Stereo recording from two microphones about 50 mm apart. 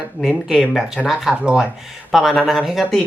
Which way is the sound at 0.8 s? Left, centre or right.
Centre.